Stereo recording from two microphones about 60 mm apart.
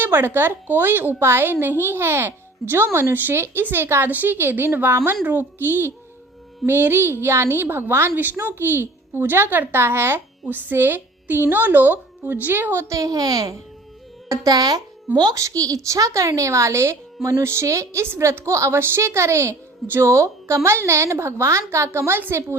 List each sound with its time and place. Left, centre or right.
0.0 s a woman's voice: right
10.4 s a woman's voice: right
12.9 s a child's voice: right
15.3 s a woman's voice: right